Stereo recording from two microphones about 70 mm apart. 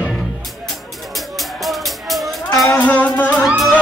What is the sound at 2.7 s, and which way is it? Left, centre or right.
Music, left.